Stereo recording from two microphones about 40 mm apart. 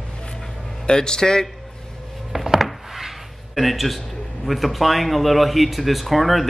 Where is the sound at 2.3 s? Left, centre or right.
Centre.